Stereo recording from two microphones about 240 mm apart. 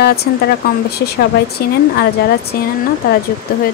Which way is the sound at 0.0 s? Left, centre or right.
Left.